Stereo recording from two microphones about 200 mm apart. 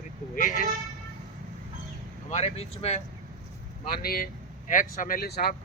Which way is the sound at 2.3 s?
30° left (ahead or behind).